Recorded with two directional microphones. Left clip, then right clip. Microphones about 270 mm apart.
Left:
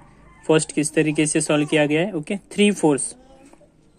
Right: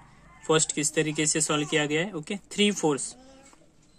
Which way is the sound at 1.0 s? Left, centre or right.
Right.